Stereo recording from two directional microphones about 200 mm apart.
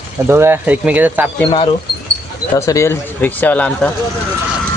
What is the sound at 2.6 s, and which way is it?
Speech, 15° left (ahead or behind).